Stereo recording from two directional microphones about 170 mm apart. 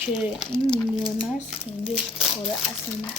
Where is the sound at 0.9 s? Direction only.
30° left (ahead or behind).